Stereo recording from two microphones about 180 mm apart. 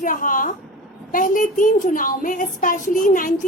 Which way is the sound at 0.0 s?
50° left (ahead or behind).